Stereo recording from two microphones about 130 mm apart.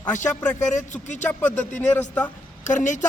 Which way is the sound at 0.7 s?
70° left (ahead or behind).